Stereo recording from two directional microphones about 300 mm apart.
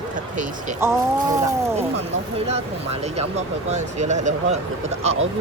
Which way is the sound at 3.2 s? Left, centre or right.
Right.